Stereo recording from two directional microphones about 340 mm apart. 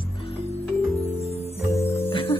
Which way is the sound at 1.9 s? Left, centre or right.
Centre.